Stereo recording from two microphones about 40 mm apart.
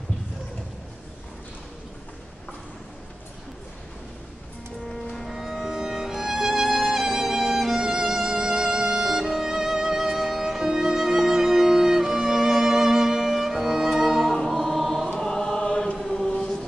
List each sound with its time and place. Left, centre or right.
4.9 s music: centre
5.3 s music: centre
7.8 s violin: centre
15.1 s choir: centre
16.0 s chant: centre
16.3 s chant: left